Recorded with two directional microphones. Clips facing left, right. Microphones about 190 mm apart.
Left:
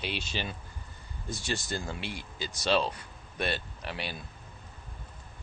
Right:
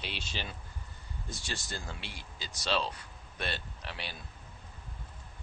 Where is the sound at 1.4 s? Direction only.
55° left (ahead or behind).